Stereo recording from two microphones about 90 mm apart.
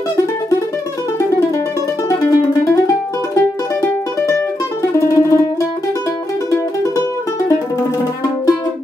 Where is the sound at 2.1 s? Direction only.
35° left (ahead or behind).